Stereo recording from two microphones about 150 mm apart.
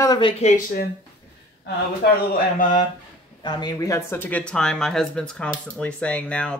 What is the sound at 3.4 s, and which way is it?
Speech, 30° left (ahead or behind).